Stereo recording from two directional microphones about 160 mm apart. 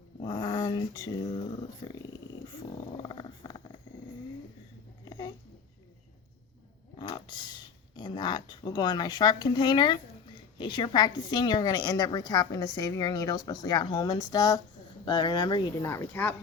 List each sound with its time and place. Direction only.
0.2 s dog: 25° left (ahead or behind)
3.0 s wild animals: 30° left (ahead or behind)
5.0 s a sound: 25° left (ahead or behind)
7.0 s speech: 25° left (ahead or behind)
15.9 s speech: 10° left (ahead or behind)